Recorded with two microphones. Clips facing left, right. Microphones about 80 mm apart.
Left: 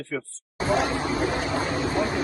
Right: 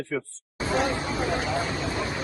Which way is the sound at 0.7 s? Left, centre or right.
Right.